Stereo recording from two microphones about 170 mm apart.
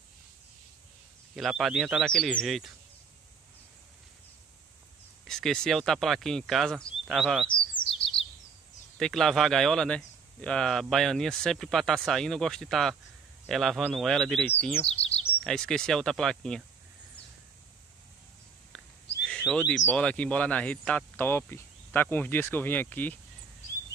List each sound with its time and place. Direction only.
1.3 s speech: centre (ahead or behind)
5.3 s speech: centre (ahead or behind)
7.4 s chirp: 30° left (ahead or behind)
8.9 s speech: centre (ahead or behind)
14.9 s chirp: 35° left (ahead or behind)
15.4 s speech: 5° left (ahead or behind)
19.2 s speech: 5° left (ahead or behind)